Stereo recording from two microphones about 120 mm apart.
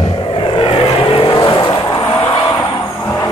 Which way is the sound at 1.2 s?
40° left (ahead or behind).